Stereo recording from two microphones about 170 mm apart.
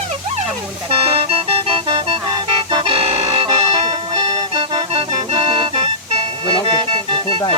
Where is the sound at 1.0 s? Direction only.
35° right (ahead or behind).